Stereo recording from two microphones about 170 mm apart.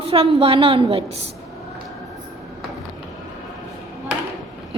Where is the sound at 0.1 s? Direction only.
35° right (ahead or behind).